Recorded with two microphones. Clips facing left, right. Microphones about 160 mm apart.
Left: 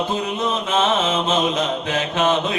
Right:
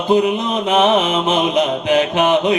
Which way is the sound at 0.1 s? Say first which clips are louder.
Right 7 dB; 15° right (ahead or behind).